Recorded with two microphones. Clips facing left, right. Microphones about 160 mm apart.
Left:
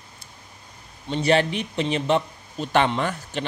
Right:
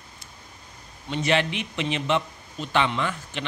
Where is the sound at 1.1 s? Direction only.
35° left (ahead or behind).